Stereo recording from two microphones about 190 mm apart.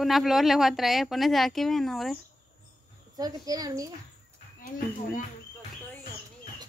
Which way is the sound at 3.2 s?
20° right (ahead or behind).